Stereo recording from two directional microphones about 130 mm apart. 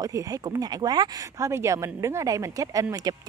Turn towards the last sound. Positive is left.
turn(degrees=-25)  # may be behind; listen again after turning